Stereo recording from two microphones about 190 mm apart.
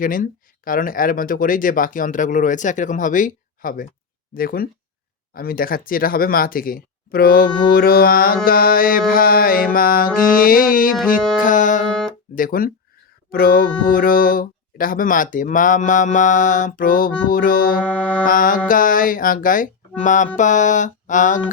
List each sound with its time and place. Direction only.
0.0 s speech: 45° left (ahead or behind)
11.3 s music: 45° left (ahead or behind)
12.3 s speech: 50° left (ahead or behind)
17.8 s music: 5° left (ahead or behind)
18.3 s speech: 45° left (ahead or behind)
20.0 s music: 40° left (ahead or behind)